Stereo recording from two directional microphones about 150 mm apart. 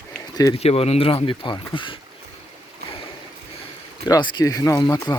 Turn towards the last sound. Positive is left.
turn(degrees=30)  # may be behind; listen again after turning